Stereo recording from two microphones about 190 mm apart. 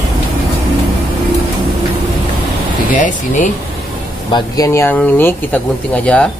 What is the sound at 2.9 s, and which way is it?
Speech, 40° left (ahead or behind).